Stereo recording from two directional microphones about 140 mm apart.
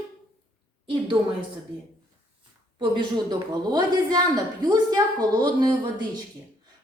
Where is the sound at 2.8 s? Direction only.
35° right (ahead or behind).